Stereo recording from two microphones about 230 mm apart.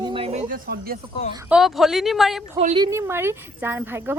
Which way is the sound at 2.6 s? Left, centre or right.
Right.